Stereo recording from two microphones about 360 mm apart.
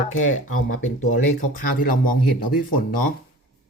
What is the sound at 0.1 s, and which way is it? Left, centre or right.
Speech, left.